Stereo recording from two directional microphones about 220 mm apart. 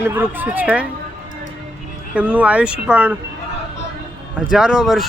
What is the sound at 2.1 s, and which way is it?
Speech, 5° right (ahead or behind).